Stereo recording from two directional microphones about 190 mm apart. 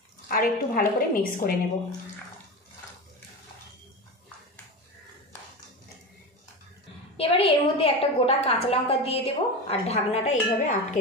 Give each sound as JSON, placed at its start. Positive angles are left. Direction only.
{"t": 0.3, "sound": "a woman's voice", "side_deg": 50}
{"t": 7.2, "sound": "a woman's voice", "side_deg": 30}